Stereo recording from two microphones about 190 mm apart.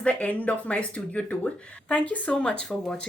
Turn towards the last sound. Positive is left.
turn(degrees=5)  # may be behind; listen again after turning